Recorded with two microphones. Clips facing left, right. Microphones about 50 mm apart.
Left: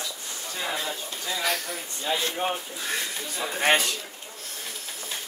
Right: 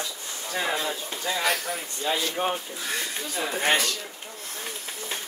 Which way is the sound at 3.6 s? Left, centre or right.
Centre.